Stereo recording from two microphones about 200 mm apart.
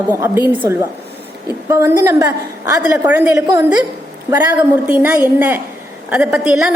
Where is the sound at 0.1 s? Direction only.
10° right (ahead or behind).